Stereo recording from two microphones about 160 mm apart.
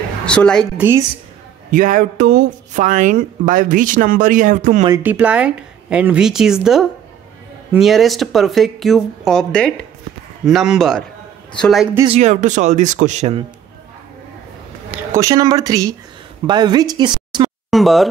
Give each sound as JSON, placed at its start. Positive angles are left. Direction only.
{"t": 0.2, "sound": "a woman's voice", "side_deg": 5}
{"t": 0.7, "sound": "a woman's voice", "side_deg": -15}
{"t": 1.7, "sound": "speech", "side_deg": -55}
{"t": 5.0, "sound": "speech", "side_deg": -10}
{"t": 12.1, "sound": "speech", "side_deg": -45}
{"t": 15.1, "sound": "speech", "side_deg": -20}
{"t": 17.6, "sound": "speech", "side_deg": 0}